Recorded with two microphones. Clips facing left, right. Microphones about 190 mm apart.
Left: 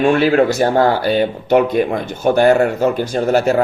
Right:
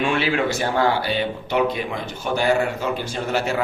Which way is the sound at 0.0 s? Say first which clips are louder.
Left 9 dB; 40° left (ahead or behind).